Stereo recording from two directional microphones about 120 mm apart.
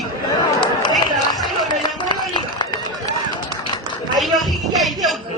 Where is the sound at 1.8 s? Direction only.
40° left (ahead or behind).